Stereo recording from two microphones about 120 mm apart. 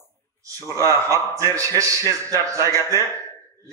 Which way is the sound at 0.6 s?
25° left (ahead or behind).